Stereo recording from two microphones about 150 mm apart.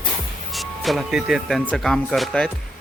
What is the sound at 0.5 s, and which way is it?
Speech, centre (ahead or behind).